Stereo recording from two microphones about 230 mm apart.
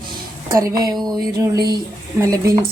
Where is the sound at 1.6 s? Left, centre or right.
Centre.